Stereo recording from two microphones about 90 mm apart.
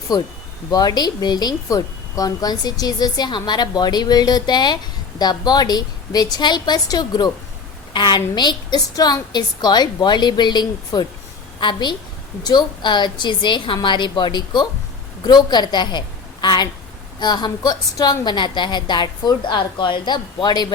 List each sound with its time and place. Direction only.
0.1 s a woman's voice: 45° left (ahead or behind)